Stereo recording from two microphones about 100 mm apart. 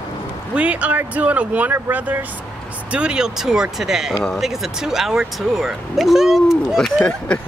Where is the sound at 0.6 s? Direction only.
15° right (ahead or behind); by 7.2 s centre (ahead or behind).